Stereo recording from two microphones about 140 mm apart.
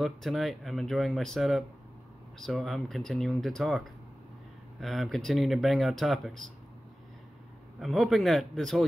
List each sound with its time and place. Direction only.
0.0 s speech: centre (ahead or behind)
7.8 s speech: centre (ahead or behind)